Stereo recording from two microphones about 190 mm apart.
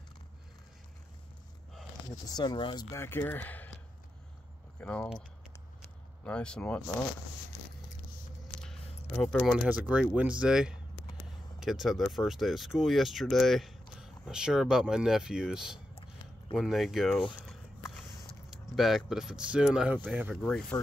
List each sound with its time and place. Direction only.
2.2 s speech: 20° left (ahead or behind)
4.7 s speech: 5° left (ahead or behind)
6.2 s speech: 5° left (ahead or behind)
9.1 s speech: 5° left (ahead or behind)
18.5 s speech: centre (ahead or behind)
20.7 s speech: 15° left (ahead or behind)